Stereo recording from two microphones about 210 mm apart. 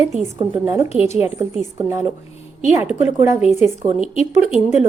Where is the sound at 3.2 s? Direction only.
10° right (ahead or behind).